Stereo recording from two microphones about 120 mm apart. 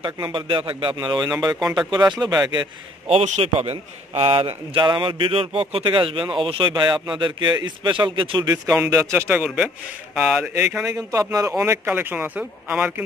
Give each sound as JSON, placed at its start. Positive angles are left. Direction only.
{"t": 0.0, "sound": "a man's voice", "side_deg": -40}
{"t": 1.6, "sound": "speech", "side_deg": -5}
{"t": 2.1, "sound": "speech", "side_deg": -35}
{"t": 3.1, "sound": "a man's voice", "side_deg": -65}
{"t": 8.9, "sound": "speech", "side_deg": -25}
{"t": 9.3, "sound": "speech", "side_deg": -10}
{"t": 10.9, "sound": "speech", "side_deg": -30}